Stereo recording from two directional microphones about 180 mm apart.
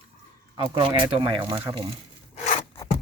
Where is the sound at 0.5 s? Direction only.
30° right (ahead or behind).